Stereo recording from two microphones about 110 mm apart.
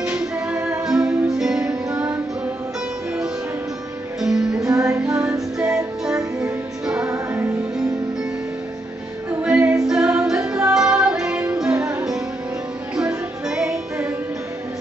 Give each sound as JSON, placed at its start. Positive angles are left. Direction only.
{"t": 0.2, "sound": "music", "side_deg": -10}
{"t": 4.2, "sound": "music", "side_deg": -5}
{"t": 4.6, "sound": "music", "side_deg": -30}
{"t": 5.6, "sound": "music", "side_deg": -5}
{"t": 9.4, "sound": "a capella", "side_deg": -10}
{"t": 10.7, "sound": "music", "side_deg": -5}
{"t": 12.9, "sound": "music", "side_deg": -5}